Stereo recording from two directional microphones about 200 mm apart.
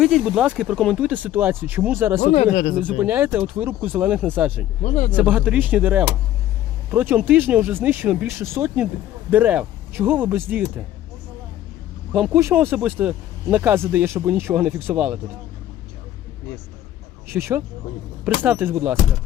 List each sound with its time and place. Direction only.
0.0 s speech: centre (ahead or behind)
4.8 s speech: 35° left (ahead or behind)
5.1 s speech: 5° right (ahead or behind)
12.1 s speech: 5° right (ahead or behind)
17.2 s speech: 10° right (ahead or behind)